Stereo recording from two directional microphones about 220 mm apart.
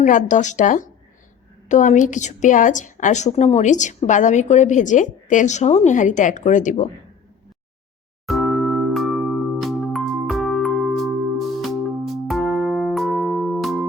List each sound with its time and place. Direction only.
0.0 s a woman's voice: 35° left (ahead or behind)
8.3 s music: centre (ahead or behind)